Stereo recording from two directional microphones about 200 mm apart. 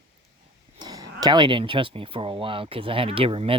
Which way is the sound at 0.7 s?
20° right (ahead or behind).